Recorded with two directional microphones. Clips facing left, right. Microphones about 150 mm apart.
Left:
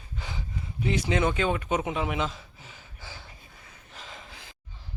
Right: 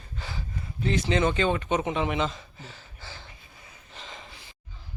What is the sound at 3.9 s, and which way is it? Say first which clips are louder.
Gasp: right 1 dB; 5° left (ahead or behind).